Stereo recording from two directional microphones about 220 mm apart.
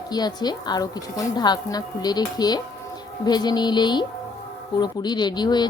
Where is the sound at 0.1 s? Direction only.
20° left (ahead or behind).